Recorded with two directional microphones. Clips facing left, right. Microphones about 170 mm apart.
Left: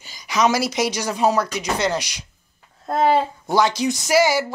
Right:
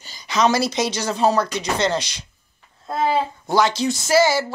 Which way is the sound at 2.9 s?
50° left (ahead or behind).